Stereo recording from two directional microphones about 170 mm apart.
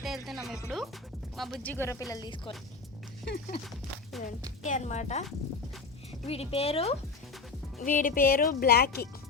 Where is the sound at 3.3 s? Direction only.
90° left.